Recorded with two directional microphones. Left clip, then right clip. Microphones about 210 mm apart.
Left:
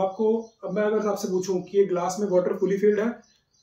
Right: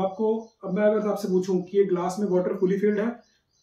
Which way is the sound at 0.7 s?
Centre (ahead or behind).